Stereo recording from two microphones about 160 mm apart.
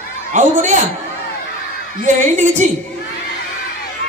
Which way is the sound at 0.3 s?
50° right (ahead or behind).